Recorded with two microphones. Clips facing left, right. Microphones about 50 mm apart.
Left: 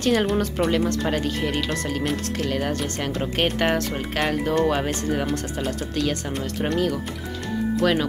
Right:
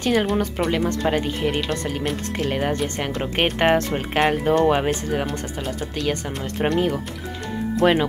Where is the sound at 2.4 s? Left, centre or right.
Right.